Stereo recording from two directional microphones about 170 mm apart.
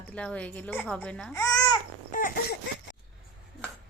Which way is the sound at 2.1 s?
55° left (ahead or behind).